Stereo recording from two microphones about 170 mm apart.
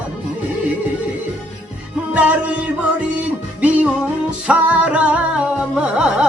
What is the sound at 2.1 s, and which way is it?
Music, 10° right (ahead or behind).